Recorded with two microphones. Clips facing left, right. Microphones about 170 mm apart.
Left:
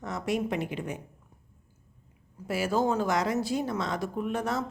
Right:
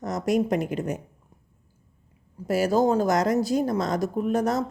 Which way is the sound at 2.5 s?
40° right (ahead or behind).